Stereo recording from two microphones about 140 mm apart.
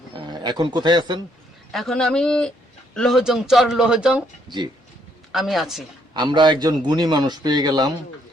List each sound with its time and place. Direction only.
0.2 s a man's voice: 30° right (ahead or behind)
1.7 s speech: centre (ahead or behind)
6.1 s a man's voice: 35° right (ahead or behind)